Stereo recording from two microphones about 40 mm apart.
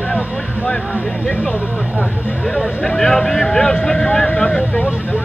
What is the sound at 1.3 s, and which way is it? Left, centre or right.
Speech, left.